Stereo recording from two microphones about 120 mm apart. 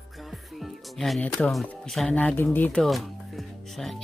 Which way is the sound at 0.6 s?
Centre (ahead or behind).